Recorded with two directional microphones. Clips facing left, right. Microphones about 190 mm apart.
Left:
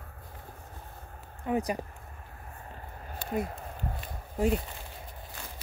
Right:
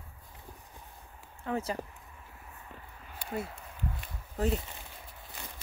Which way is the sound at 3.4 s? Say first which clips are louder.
Left 3 dB; 45° left (ahead or behind).